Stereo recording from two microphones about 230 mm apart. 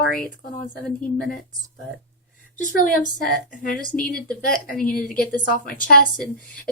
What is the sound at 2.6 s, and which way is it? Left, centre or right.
Speech, left.